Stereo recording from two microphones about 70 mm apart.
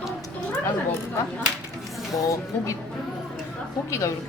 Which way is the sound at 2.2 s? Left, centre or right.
Left.